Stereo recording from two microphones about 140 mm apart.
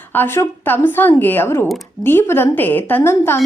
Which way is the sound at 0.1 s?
15° left (ahead or behind).